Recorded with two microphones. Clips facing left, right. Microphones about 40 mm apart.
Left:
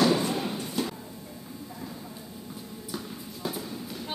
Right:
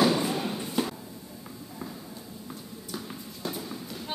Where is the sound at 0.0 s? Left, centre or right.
Centre.